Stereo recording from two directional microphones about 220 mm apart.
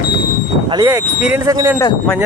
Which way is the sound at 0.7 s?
15° right (ahead or behind).